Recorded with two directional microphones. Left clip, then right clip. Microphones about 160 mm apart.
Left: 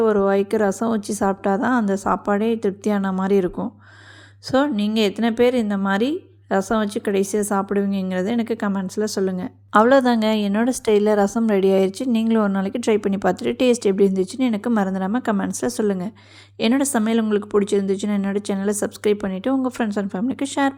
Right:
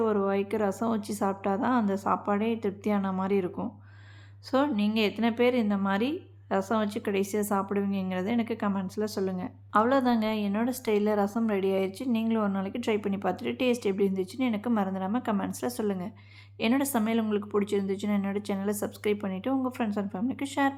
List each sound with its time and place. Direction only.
0.0 s a woman's voice: 35° left (ahead or behind)